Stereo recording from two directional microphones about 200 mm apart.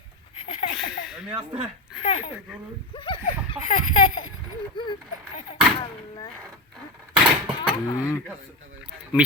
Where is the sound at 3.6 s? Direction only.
40° left (ahead or behind).